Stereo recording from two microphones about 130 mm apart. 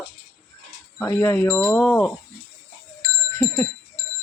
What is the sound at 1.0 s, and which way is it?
Speech, 20° left (ahead or behind).